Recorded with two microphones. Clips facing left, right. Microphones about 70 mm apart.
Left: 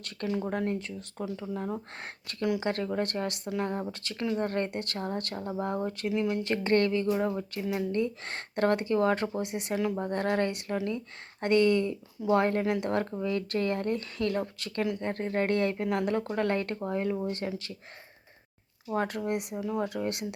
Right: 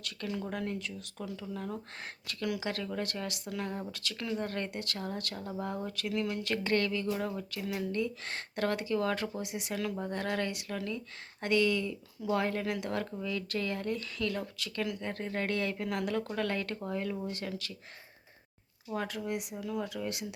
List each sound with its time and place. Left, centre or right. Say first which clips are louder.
0.4 s speech: left 5 dB; left
9.7 s speech: left 6 dB; left
10.0 s speech: left 5 dB; left
18.9 s speech: left 5 dB; left
19.5 s speech: left 5 dB; left
19.9 s speech: left 5 dB; left